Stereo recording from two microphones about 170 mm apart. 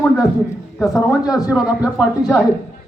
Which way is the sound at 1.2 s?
20° left (ahead or behind).